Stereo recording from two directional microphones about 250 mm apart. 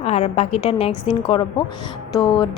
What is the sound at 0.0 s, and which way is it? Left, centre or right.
A woman's voice, left.